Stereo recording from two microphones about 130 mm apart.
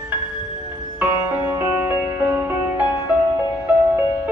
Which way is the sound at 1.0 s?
15° right (ahead or behind).